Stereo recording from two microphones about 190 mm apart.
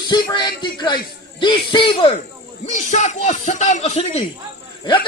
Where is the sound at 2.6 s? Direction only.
40° left (ahead or behind).